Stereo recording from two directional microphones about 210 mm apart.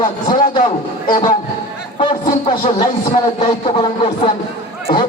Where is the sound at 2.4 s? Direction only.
25° left (ahead or behind).